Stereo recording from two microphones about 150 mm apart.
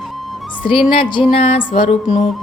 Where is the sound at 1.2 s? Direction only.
45° left (ahead or behind).